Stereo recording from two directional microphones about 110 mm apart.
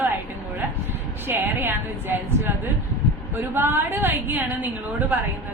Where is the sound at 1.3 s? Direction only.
20° right (ahead or behind).